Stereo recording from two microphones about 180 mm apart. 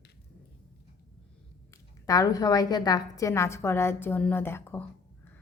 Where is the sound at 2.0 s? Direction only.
20° left (ahead or behind).